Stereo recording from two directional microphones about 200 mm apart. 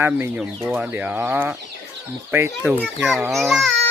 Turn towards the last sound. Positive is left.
turn(degrees=0)  # may be behind; listen again after turning